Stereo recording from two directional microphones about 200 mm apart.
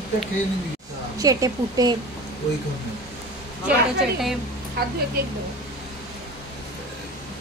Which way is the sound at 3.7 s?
5° right (ahead or behind).